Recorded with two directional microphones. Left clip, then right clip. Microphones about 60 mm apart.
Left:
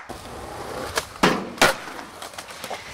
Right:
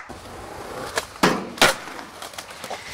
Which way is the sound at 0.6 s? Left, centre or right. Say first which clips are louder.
Even; centre.